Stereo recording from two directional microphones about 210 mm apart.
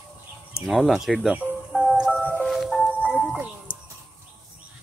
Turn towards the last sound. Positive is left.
turn(degrees=20)  # may be behind; listen again after turning